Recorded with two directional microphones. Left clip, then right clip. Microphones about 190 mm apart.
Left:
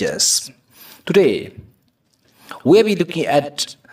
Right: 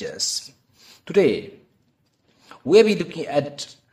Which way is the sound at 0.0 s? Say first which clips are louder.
Left 9 dB; 35° left (ahead or behind).